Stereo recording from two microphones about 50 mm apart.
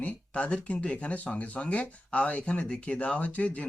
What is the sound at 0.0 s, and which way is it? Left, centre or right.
Speech, left.